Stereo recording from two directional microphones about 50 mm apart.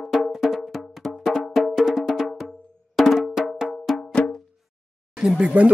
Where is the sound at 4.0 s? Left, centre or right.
Left.